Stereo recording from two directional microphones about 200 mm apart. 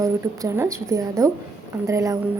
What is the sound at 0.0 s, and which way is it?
A woman's voice, 15° right (ahead or behind).